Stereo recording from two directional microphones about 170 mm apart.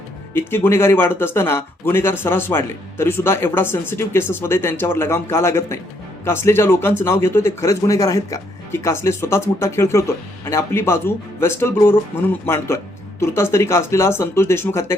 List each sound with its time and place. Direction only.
0.3 s speech: 15° left (ahead or behind)